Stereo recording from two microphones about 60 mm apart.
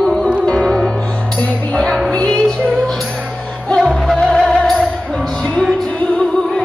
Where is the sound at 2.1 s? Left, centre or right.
Centre.